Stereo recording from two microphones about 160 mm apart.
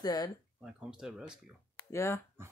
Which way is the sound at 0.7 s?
5° right (ahead or behind).